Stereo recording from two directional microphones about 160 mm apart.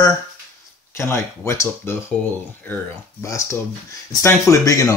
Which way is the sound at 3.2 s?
20° left (ahead or behind).